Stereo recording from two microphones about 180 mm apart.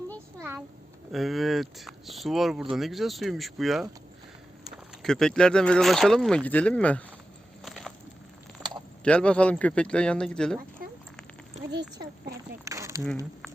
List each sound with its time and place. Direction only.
0.3 s a sound: 15° right (ahead or behind)
1.1 s speech: centre (ahead or behind)
7.6 s crushing: centre (ahead or behind)
8.6 s mechanisms: 5° right (ahead or behind)
9.0 s speech: 5° left (ahead or behind)
12.6 s a sound: 15° right (ahead or behind)